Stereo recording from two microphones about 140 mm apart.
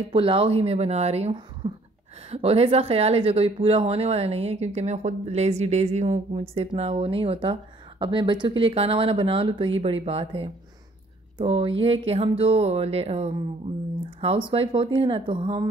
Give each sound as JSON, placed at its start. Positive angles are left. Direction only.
{"t": 0.1, "sound": "speech", "side_deg": -40}